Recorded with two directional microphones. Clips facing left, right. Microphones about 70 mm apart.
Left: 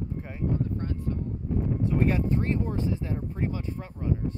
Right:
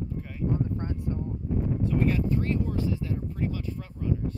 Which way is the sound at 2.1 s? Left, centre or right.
Left.